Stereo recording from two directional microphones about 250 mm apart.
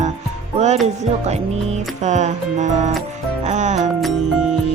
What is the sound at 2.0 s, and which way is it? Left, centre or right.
Speech, right.